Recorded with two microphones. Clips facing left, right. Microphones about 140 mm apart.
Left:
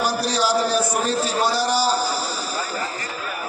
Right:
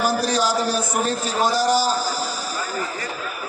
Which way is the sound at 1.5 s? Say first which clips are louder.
Right 1 dB; 45° right (ahead or behind).